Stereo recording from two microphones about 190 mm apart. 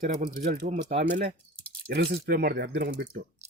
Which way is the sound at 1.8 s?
60° right (ahead or behind).